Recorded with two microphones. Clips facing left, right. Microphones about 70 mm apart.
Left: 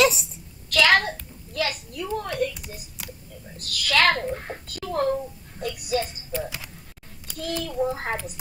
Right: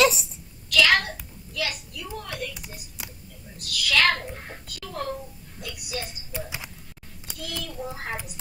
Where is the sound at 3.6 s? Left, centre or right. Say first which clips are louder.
Left 1 dB; left.